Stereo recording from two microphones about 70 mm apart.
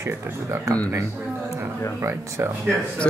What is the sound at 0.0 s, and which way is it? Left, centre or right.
Speech, right.